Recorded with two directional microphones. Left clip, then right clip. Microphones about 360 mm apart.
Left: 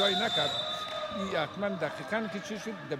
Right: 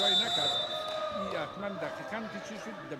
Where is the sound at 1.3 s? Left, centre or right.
Left.